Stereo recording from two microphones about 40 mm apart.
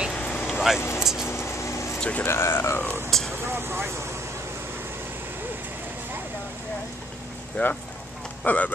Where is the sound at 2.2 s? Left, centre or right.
Left.